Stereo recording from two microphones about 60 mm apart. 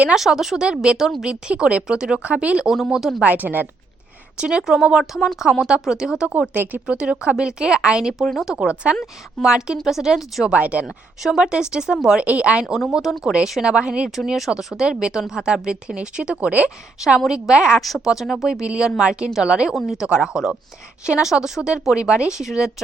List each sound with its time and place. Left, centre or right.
0.1 s speech: centre
2.6 s speech: centre
3.2 s speech: right
4.4 s speech: centre
6.5 s speech: right
6.8 s speech: centre
10.5 s speech: right
10.8 s speech: centre
12.2 s speech: right
12.6 s speech: centre
13.3 s speech: centre
17.0 s speech: centre
18.6 s speech: centre